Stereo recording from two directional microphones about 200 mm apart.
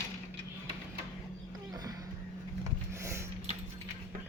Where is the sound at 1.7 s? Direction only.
20° right (ahead or behind).